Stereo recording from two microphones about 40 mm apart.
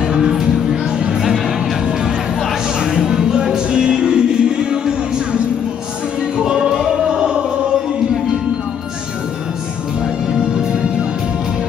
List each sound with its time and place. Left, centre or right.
0.0 s music: centre
2.8 s music: centre